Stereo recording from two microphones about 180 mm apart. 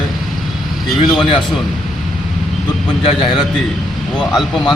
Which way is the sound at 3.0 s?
30° left (ahead or behind).